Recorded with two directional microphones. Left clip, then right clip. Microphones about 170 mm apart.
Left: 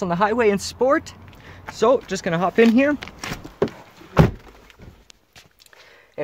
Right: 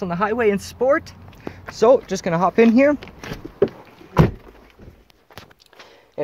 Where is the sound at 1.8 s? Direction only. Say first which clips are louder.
Right 3 dB; centre (ahead or behind).